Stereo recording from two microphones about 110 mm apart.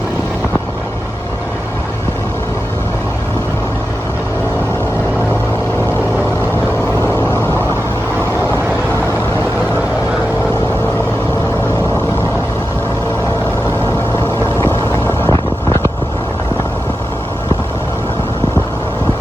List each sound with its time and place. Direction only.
14.6 s vehicle: 25° left (ahead or behind)